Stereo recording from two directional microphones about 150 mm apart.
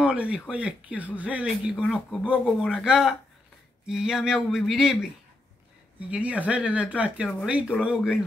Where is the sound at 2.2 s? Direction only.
5° right (ahead or behind).